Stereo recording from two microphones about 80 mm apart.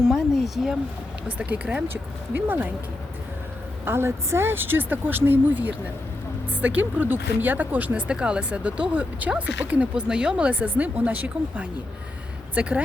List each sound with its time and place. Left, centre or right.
0.0 s speech: centre
1.4 s a woman's voice: centre
3.8 s a woman's voice: right